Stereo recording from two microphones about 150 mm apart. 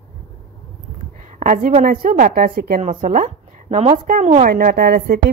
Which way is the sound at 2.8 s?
60° right (ahead or behind).